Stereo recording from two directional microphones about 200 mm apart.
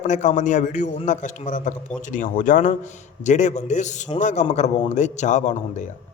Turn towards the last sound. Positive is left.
turn(degrees=35)  # may be behind; listen again after turning